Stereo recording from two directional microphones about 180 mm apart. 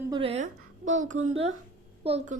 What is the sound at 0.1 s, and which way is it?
Speech, 30° right (ahead or behind).